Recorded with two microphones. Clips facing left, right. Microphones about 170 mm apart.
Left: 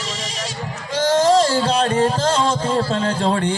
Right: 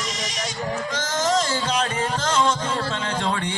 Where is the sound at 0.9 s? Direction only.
30° left (ahead or behind).